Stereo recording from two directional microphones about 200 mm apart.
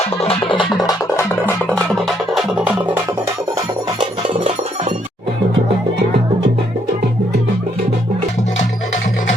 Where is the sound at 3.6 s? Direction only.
20° right (ahead or behind).